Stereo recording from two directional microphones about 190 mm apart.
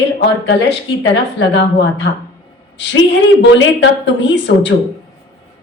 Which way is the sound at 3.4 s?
70° left (ahead or behind).